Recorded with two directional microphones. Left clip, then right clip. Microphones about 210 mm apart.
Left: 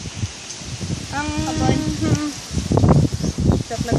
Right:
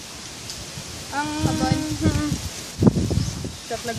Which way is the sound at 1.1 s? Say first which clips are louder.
Left 1 dB; 30° left (ahead or behind).